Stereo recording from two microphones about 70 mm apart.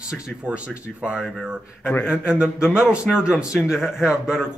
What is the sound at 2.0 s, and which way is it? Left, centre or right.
Speech, centre.